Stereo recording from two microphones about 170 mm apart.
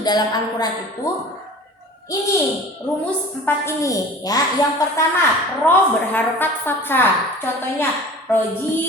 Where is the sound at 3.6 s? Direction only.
20° left (ahead or behind).